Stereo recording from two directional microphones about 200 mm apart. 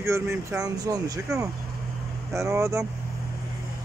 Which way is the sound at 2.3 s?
15° right (ahead or behind).